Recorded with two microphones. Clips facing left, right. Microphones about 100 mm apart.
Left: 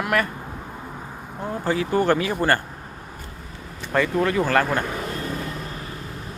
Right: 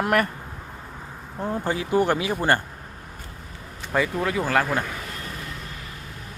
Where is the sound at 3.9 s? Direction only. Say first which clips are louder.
Left 3 dB; 5° right (ahead or behind).